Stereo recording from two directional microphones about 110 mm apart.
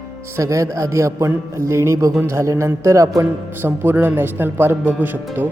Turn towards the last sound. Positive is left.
turn(degrees=-20)  # may be behind; listen again after turning